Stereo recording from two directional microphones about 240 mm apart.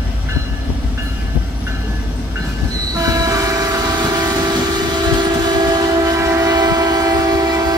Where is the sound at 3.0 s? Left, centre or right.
Centre.